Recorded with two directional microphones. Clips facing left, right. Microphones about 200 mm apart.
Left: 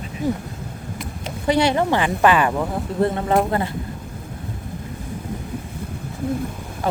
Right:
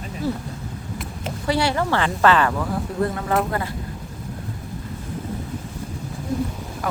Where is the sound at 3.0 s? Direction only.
25° left (ahead or behind).